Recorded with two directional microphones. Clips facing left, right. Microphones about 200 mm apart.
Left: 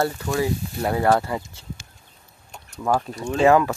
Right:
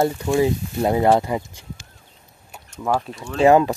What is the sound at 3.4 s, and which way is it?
Speech, 20° right (ahead or behind).